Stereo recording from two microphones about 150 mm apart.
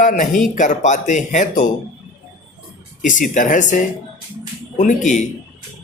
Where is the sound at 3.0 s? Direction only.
60° left (ahead or behind).